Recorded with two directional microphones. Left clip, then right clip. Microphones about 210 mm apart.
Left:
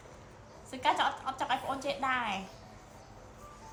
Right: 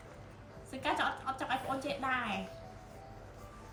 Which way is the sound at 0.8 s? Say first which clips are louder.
Left 4 dB; 30° left (ahead or behind).